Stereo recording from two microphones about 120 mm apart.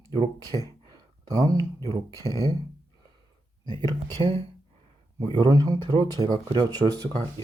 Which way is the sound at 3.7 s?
40° right (ahead or behind).